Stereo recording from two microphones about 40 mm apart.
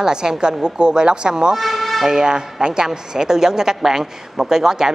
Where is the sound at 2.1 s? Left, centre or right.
Centre.